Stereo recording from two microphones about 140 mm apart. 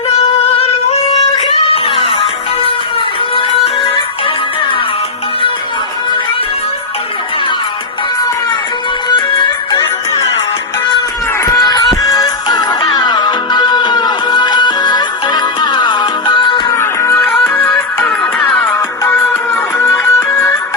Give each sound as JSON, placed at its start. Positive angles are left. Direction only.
{"t": 1.4, "sound": "music", "side_deg": 40}
{"t": 9.1, "sound": "music", "side_deg": 35}
{"t": 11.5, "sound": "music", "side_deg": 30}
{"t": 16.7, "sound": "music", "side_deg": 20}
{"t": 17.2, "sound": "music", "side_deg": 5}
{"t": 18.6, "sound": "music", "side_deg": 20}